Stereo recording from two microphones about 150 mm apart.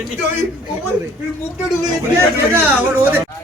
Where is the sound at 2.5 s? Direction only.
15° right (ahead or behind).